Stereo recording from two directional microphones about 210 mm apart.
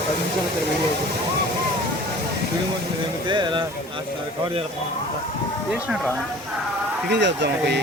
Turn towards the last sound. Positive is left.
turn(degrees=-55)  # may be behind; listen again after turning